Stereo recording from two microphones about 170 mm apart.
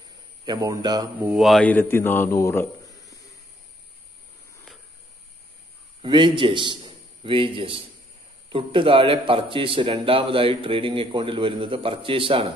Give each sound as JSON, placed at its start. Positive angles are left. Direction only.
{"t": 0.5, "sound": "speech", "side_deg": -20}
{"t": 1.2, "sound": "a man's voice", "side_deg": 0}
{"t": 6.0, "sound": "a man's voice", "side_deg": -30}